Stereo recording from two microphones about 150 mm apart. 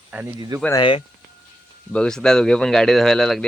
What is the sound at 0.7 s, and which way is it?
Speech, 30° left (ahead or behind).